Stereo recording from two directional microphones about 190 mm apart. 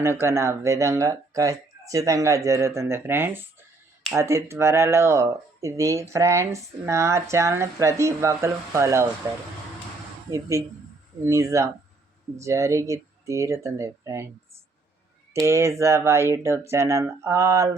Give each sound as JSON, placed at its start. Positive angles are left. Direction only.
{"t": 0.0, "sound": "speech", "side_deg": -15}
{"t": 15.3, "sound": "speech", "side_deg": -15}